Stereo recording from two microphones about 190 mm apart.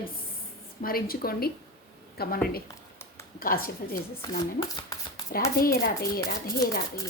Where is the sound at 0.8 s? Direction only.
50° left (ahead or behind).